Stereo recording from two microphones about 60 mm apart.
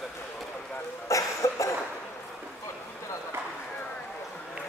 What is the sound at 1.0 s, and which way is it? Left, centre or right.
Cough, left.